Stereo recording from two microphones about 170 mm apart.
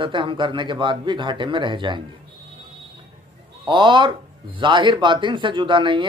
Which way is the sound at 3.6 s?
30° right (ahead or behind).